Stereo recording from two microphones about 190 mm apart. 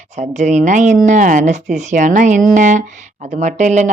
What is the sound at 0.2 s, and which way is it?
Speech, 40° right (ahead or behind).